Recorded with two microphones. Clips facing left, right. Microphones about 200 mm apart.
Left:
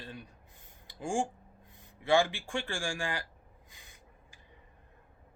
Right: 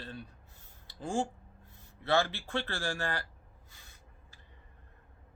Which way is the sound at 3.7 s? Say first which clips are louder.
Left 2 dB; 15° left (ahead or behind).